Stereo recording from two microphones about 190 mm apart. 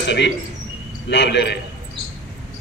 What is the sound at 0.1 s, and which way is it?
A man's voice, 65° left (ahead or behind).